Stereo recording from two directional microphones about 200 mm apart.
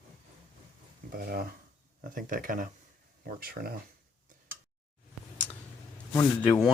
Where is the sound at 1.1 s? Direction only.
50° right (ahead or behind).